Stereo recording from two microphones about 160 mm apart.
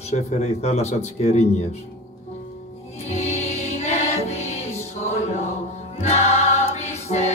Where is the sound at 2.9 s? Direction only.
45° left (ahead or behind).